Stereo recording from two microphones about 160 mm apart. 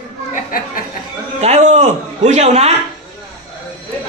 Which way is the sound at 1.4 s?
45° right (ahead or behind).